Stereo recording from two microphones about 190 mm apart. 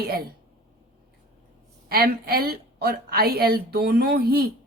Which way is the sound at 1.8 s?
55° right (ahead or behind).